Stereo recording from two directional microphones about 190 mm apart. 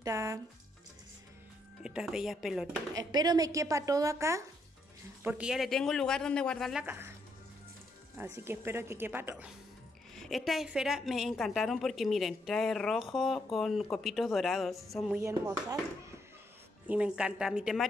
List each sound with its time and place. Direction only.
0.0 s speech: 15° right (ahead or behind)
1.8 s a woman's voice: 5° right (ahead or behind)
2.9 s a woman's voice: 20° right (ahead or behind)
8.2 s speech: 10° right (ahead or behind)
10.1 s a woman's voice: centre (ahead or behind)
15.1 s speech: 15° right (ahead or behind)
16.8 s a woman's voice: 5° right (ahead or behind)